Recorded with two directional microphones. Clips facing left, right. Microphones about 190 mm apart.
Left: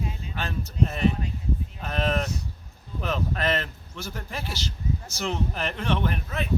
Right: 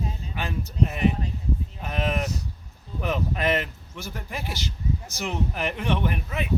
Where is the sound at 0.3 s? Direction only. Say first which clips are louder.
Right 1 dB; 15° right (ahead or behind).